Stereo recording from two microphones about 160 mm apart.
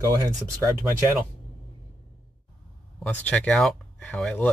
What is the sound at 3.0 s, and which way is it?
Speech, 10° left (ahead or behind).